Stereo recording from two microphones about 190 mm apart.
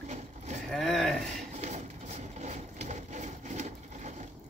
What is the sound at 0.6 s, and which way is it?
Speech, centre (ahead or behind).